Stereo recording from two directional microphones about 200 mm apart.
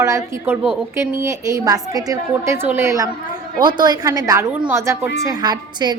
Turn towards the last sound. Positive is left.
turn(degrees=-20)  # may be behind; listen again after turning